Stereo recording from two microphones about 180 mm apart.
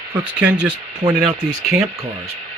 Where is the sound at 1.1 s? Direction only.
5° right (ahead or behind).